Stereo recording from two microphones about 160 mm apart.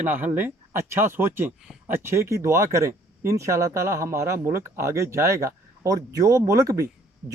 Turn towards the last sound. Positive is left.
turn(degrees=-20)  # may be behind; listen again after turning